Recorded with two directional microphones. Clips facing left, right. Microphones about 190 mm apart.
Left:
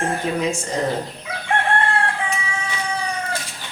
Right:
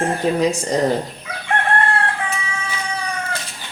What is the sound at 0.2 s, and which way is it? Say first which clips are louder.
Speech: right 7 dB; 35° right (ahead or behind).